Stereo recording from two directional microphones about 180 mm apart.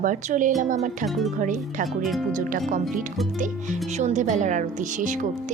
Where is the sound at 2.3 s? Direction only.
45° right (ahead or behind).